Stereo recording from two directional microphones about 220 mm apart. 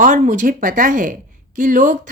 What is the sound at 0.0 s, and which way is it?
Speech, 35° right (ahead or behind).